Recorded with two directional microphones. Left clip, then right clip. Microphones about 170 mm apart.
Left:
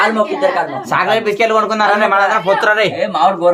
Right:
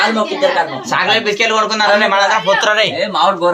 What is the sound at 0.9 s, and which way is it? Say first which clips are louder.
A man's voice: even; 70° left (ahead or behind).